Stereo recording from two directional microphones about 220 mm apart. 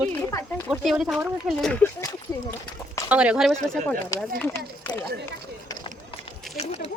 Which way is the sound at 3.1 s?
5° right (ahead or behind).